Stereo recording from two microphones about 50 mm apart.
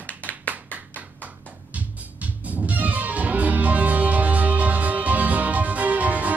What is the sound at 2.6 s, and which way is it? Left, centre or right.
Music, right.